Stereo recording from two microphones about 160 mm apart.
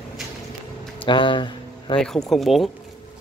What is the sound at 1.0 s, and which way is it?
Speech, 30° left (ahead or behind).